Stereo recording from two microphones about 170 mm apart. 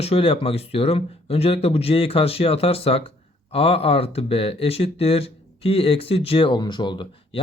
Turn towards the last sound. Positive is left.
turn(degrees=30)  # may be behind; listen again after turning